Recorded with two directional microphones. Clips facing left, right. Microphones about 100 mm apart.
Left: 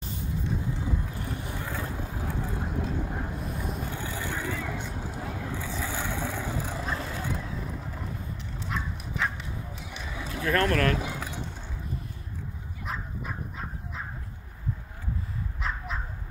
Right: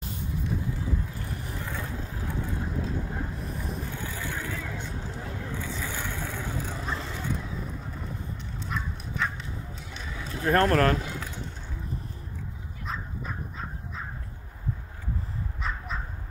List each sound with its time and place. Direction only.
1.3 s vehicle: centre (ahead or behind)
1.7 s vehicle: 15° left (ahead or behind)
3.3 s vehicle: centre (ahead or behind)
8.6 s horse: 5° left (ahead or behind)
9.8 s a sound: 10° left (ahead or behind)
10.4 s speech: 35° right (ahead or behind)
11.0 s a sound: 10° left (ahead or behind)
12.8 s dog: 5° left (ahead or behind)